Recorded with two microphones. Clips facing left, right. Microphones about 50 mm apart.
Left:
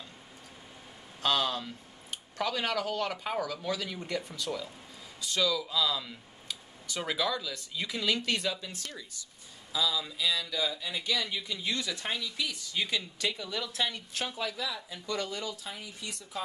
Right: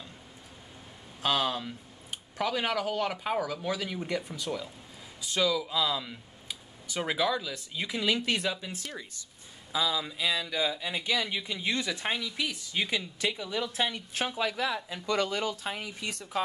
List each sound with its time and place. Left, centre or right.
1.2 s speech: centre; by 16.4 s right